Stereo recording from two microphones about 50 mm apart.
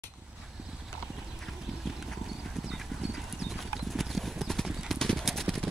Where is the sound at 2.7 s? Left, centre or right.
Centre.